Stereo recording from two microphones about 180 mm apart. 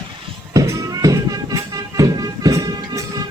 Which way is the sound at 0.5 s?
20° right (ahead or behind).